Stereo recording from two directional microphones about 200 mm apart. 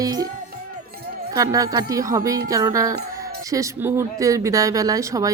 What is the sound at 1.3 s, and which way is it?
Speech, 15° right (ahead or behind).